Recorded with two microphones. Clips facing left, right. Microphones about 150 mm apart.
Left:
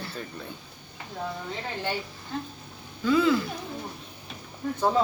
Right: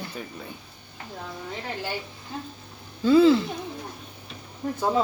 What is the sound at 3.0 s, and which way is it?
Speech, 30° right (ahead or behind).